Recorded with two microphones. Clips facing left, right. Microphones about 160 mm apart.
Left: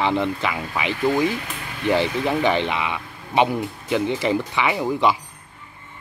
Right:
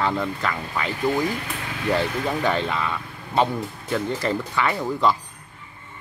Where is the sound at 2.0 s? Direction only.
20° left (ahead or behind).